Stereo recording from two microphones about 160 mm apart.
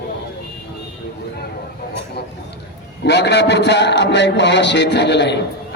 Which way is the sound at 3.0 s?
90° left.